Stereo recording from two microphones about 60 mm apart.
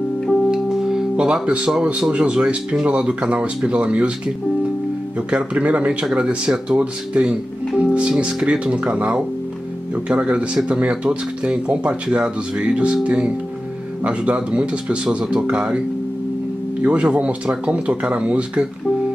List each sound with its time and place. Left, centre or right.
0.5 s speech: centre
5.3 s speech: right
16.8 s speech: right